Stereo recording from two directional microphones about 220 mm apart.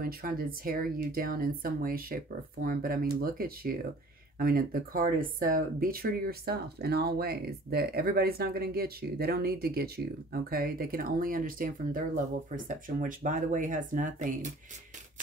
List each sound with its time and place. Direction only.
0.0 s speech: 40° right (ahead or behind)